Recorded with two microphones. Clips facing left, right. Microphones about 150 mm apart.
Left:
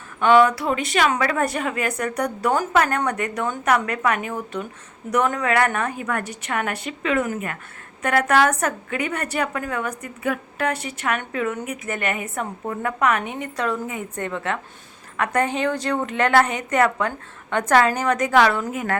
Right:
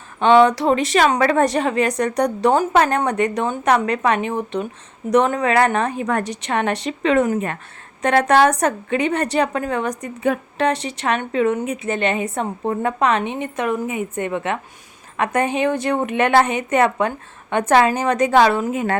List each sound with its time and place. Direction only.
0.2 s a woman's voice: 25° right (ahead or behind)